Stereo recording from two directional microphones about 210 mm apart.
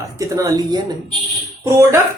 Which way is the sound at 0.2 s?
15° right (ahead or behind).